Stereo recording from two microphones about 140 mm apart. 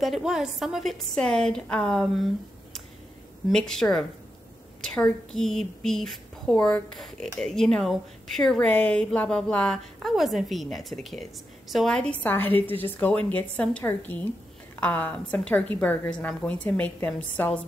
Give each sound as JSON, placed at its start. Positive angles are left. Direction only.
{"t": 0.0, "sound": "a woman's voice", "side_deg": 0}
{"t": 3.4, "sound": "a woman's voice", "side_deg": 5}